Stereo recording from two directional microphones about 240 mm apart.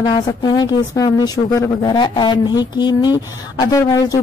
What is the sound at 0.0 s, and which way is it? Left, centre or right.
Speech, centre.